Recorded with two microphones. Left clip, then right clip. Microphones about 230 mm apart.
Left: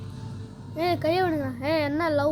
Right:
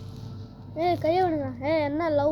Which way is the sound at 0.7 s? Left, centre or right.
Left.